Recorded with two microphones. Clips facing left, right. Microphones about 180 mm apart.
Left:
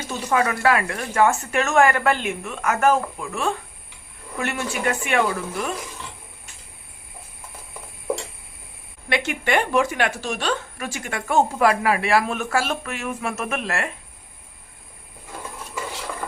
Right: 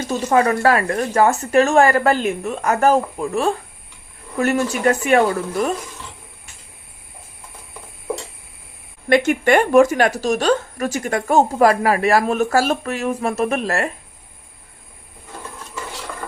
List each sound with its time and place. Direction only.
0.1 s speech: 40° right (ahead or behind)
9.0 s speech: 45° right (ahead or behind)